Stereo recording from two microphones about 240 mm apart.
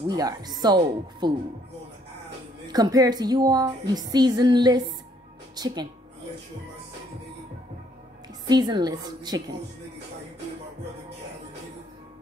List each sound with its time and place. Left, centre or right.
0.1 s speech: centre
2.7 s speech: centre
8.5 s speech: centre